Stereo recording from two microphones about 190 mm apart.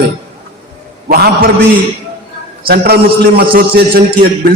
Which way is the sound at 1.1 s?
55° right (ahead or behind).